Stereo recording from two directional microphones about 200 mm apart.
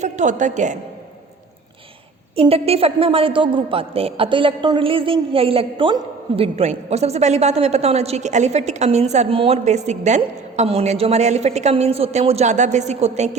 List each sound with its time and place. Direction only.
0.0 s a woman's voice: 35° right (ahead or behind)
2.3 s a woman's voice: 30° right (ahead or behind)